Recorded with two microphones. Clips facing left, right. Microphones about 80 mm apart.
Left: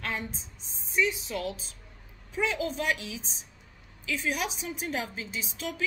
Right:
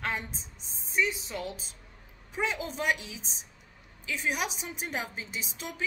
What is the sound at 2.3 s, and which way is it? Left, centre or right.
Speech, right.